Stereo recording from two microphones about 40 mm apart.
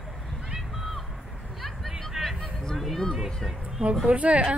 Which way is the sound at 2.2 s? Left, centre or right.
Centre.